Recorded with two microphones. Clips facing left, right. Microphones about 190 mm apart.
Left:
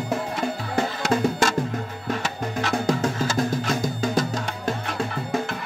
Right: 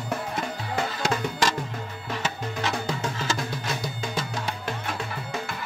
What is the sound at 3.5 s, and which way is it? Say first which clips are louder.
Music: left 7 dB; 45° left (ahead or behind).